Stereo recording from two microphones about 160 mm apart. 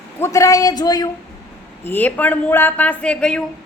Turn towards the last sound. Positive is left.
turn(degrees=5)  # may be behind; listen again after turning